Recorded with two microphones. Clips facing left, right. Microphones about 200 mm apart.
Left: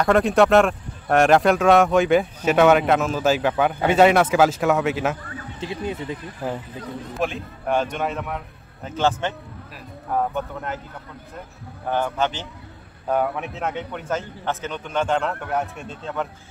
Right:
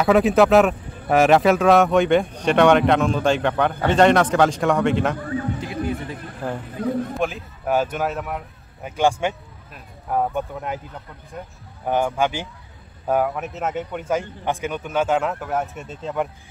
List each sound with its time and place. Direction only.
0.0 s speech: 5° right (ahead or behind)
5.6 s speech: 20° left (ahead or behind)
6.4 s a man's voice: 5° left (ahead or behind); by 10.8 s 10° right (ahead or behind)
11.9 s a man's voice: 10° right (ahead or behind)